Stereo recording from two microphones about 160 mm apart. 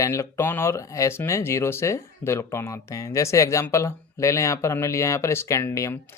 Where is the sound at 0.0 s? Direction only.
20° left (ahead or behind).